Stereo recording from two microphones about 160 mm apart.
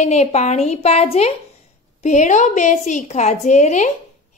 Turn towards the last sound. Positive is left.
turn(degrees=50)  # may be behind; listen again after turning